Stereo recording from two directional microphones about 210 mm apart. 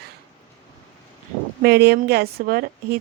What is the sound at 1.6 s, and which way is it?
Speech, 50° right (ahead or behind).